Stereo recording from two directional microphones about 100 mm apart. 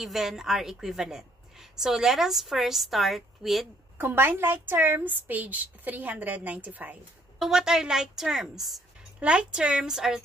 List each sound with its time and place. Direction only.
0.0 s a woman's voice: 5° right (ahead or behind)
4.0 s a woman's voice: 20° right (ahead or behind)
7.3 s a woman's voice: 5° right (ahead or behind)